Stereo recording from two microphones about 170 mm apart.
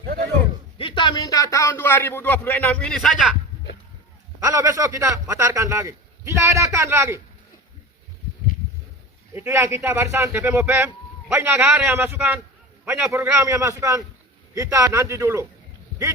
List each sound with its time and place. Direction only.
0.8 s a man's voice: 30° left (ahead or behind); by 3.3 s centre (ahead or behind)
4.4 s a man's voice: 20° right (ahead or behind)
9.3 s a man's voice: 15° right (ahead or behind)